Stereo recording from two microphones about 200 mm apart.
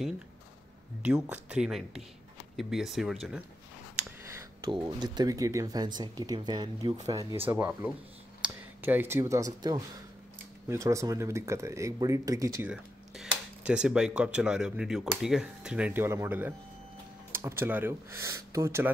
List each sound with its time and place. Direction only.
1.0 s speech: 5° right (ahead or behind)
4.2 s speech: 15° right (ahead or behind)
12.6 s speech: 5° right (ahead or behind)